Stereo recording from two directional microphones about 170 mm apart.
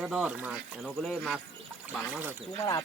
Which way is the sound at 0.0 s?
5° right (ahead or behind).